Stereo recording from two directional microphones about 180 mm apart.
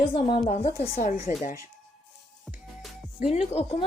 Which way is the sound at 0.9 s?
45° left (ahead or behind).